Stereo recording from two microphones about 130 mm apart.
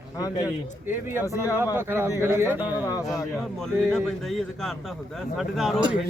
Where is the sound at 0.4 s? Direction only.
15° right (ahead or behind).